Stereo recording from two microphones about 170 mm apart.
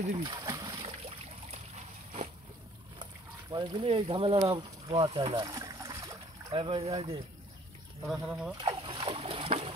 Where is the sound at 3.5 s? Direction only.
30° right (ahead or behind).